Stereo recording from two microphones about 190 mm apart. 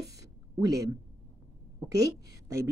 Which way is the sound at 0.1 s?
20° right (ahead or behind).